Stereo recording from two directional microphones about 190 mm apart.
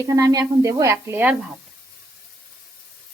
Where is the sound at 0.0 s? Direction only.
15° right (ahead or behind).